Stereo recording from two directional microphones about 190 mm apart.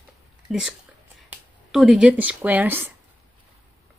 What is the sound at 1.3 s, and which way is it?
Speech, centre (ahead or behind).